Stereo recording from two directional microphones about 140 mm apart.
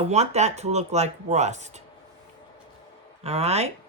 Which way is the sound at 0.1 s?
50° right (ahead or behind).